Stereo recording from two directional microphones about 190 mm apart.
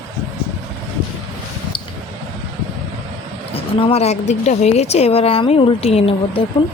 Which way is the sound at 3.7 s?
30° left (ahead or behind).